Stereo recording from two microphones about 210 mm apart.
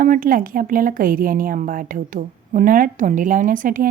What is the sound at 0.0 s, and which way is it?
A woman's voice, 40° right (ahead or behind).